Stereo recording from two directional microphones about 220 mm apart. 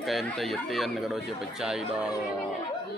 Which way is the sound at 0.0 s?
Centre (ahead or behind).